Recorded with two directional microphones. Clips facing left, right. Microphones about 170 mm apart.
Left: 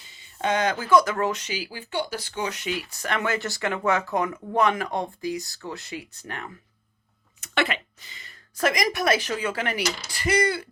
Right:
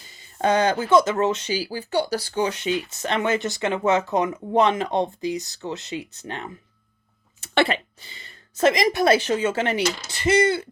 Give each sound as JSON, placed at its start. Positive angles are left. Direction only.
{"t": 0.0, "sound": "speech", "side_deg": -40}